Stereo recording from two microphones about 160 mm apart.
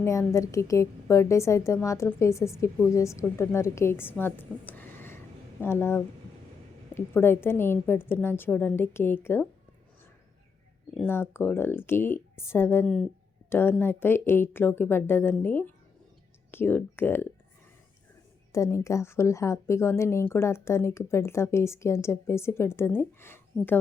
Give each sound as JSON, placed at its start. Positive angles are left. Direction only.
{"t": 0.0, "sound": "a woman's voice", "side_deg": 20}
{"t": 11.0, "sound": "a woman's voice", "side_deg": 15}
{"t": 18.5, "sound": "a woman's voice", "side_deg": 20}